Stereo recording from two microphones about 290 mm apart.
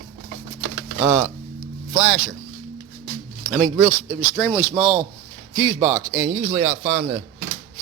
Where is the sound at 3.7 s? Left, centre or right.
Centre.